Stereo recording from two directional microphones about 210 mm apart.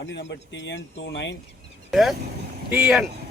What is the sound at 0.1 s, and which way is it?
Speech, 55° left (ahead or behind).